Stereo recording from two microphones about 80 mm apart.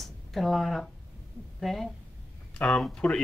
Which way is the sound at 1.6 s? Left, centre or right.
Centre.